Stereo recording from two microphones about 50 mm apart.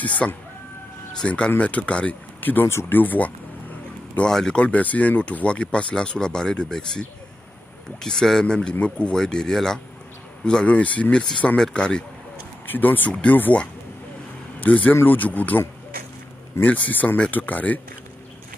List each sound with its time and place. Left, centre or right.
0.0 s speech: left
2.4 s speech: left
4.3 s speech: centre
4.6 s speech: left
9.1 s speech: centre
12.6 s speech: left
13.1 s speech: left
14.6 s speech: left